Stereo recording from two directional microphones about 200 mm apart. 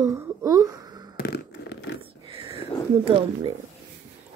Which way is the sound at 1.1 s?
55° left (ahead or behind).